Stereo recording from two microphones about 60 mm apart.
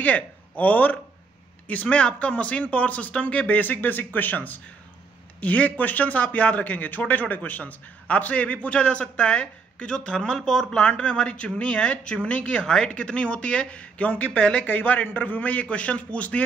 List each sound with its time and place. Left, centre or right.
0.0 s speech: left